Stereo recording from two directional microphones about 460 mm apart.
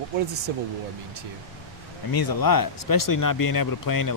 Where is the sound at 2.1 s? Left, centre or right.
Left.